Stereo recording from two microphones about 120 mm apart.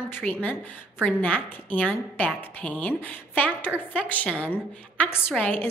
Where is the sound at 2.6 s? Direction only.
10° left (ahead or behind).